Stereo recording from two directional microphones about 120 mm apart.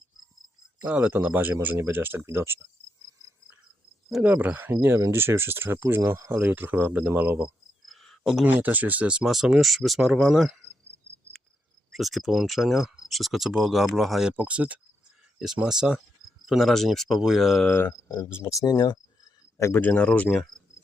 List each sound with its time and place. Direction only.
0.9 s speech: 10° right (ahead or behind)
4.1 s speech: 10° right (ahead or behind)
4.9 s speech: 30° right (ahead or behind)
5.2 s speech: 20° right (ahead or behind)
8.0 s a sound: centre (ahead or behind)
8.4 s speech: 15° right (ahead or behind)
11.9 s speech: centre (ahead or behind)
16.5 s speech: centre (ahead or behind)
17.7 s speech: 15° left (ahead or behind)